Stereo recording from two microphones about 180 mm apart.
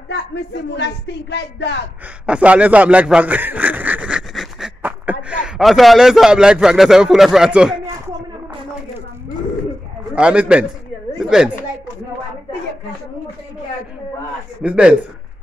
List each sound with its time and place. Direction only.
0.1 s speech: 75° left (ahead or behind)
2.2 s speech: 5° right (ahead or behind)
10.1 s a man's voice: 5° right (ahead or behind)
14.6 s a man's voice: 5° right (ahead or behind)